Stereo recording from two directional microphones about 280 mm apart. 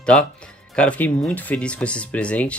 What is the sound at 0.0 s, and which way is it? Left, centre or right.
Speech, centre.